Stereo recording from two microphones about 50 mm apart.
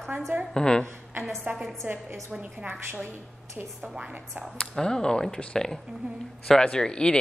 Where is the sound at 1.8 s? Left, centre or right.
Right.